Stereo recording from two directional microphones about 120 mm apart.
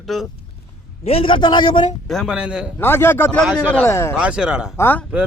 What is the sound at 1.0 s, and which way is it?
Speech, 55° left (ahead or behind).